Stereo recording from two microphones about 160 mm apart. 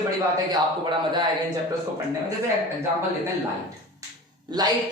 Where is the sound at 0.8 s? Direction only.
30° right (ahead or behind).